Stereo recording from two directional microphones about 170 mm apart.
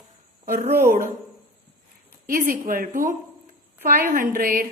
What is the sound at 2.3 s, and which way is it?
A woman's voice, 55° right (ahead or behind).